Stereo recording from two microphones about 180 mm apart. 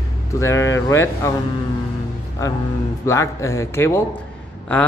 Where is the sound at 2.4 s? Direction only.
15° left (ahead or behind).